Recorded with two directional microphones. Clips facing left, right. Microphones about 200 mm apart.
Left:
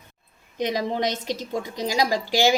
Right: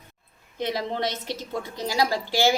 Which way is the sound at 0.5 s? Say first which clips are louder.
Left 3 dB; 15° left (ahead or behind).